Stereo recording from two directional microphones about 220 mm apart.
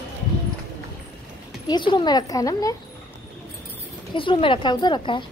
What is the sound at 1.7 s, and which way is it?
Speech, 20° left (ahead or behind).